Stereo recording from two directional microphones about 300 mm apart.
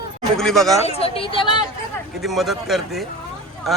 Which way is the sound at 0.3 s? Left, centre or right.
Centre.